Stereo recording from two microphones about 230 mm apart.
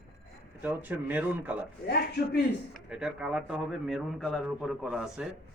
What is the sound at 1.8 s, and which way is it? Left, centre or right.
Speech, left.